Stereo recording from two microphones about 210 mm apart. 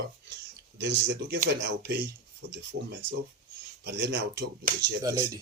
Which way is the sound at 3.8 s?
50° right (ahead or behind).